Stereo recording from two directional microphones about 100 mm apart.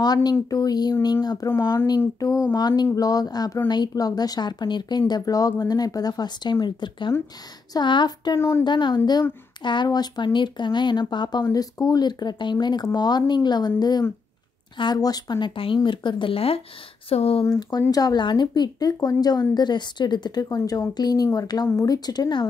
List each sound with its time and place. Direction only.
0.0 s a woman's voice: 40° left (ahead or behind)
1.5 s speech: 25° left (ahead or behind)
2.1 s a woman's voice: 35° left (ahead or behind)
8.4 s speech: 25° left (ahead or behind)
8.6 s speech: 50° left (ahead or behind); by 17.5 s 75° left (ahead or behind)
17.5 s a woman's voice: 40° left (ahead or behind)